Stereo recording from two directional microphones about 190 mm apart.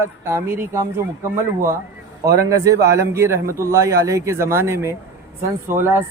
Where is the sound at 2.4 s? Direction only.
15° right (ahead or behind).